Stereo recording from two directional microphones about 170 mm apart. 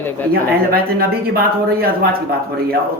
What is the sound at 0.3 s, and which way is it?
Speech, 60° right (ahead or behind).